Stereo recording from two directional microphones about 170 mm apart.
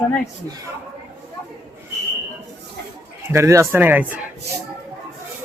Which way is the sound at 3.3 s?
15° right (ahead or behind).